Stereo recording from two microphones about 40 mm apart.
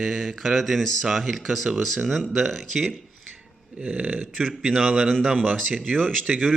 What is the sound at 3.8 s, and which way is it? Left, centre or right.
Speech, right.